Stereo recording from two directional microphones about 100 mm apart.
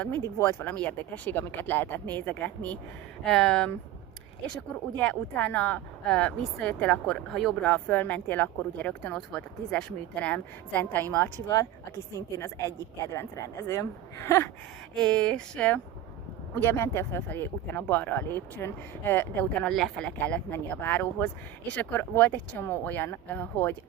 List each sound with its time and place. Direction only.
0.3 s speech: 25° left (ahead or behind)
4.9 s speech: 15° left (ahead or behind)
7.6 s speech: 15° left (ahead or behind)
12.4 s speech: 30° left (ahead or behind)
14.9 s speech: 10° left (ahead or behind)
16.6 s speech: 20° left (ahead or behind)
19.7 s speech: centre (ahead or behind)
20.1 s speech: 15° left (ahead or behind)